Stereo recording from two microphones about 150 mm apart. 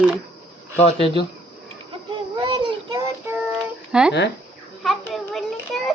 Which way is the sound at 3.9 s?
5° right (ahead or behind).